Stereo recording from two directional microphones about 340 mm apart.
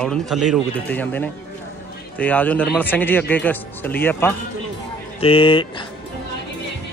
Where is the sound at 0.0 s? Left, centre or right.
Centre.